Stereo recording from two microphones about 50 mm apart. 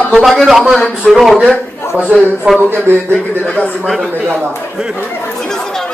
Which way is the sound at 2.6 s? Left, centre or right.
Right.